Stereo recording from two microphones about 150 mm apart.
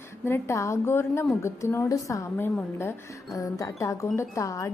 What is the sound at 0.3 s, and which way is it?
A woman's voice, 15° left (ahead or behind).